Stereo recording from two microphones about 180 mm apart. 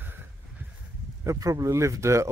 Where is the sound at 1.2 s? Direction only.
15° right (ahead or behind).